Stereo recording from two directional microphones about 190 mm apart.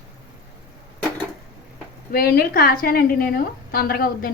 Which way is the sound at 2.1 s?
55° left (ahead or behind).